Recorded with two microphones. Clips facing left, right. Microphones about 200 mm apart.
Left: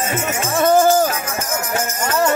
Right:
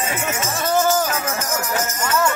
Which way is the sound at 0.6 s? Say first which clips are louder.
Left 7 dB; 50° left (ahead or behind).